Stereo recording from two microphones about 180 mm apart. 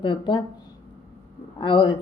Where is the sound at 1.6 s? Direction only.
25° left (ahead or behind).